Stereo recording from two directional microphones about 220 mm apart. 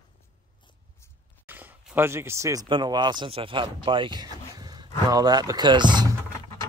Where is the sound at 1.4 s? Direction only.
10° right (ahead or behind).